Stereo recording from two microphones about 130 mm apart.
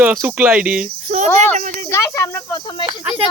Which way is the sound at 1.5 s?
75° right (ahead or behind).